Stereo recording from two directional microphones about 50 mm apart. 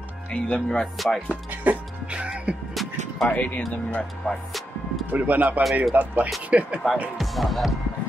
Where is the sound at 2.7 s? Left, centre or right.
Centre.